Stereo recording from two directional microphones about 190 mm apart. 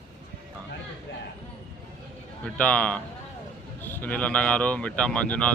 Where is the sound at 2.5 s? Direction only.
5° left (ahead or behind).